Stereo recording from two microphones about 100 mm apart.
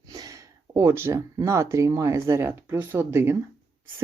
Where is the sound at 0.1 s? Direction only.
35° right (ahead or behind).